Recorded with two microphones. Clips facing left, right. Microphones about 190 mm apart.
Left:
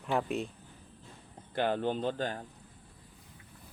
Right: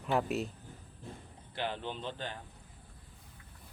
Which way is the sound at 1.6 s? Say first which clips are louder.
Left 8 dB; 50° left (ahead or behind).